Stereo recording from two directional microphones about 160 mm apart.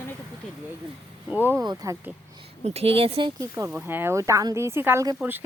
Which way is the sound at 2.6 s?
40° right (ahead or behind).